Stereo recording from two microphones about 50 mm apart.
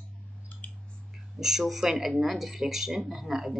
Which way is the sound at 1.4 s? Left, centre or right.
Centre.